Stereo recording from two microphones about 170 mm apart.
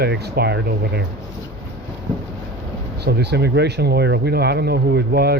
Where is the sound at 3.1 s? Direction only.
75° right (ahead or behind).